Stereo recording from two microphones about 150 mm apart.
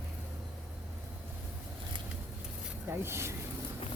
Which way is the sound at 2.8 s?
15° right (ahead or behind).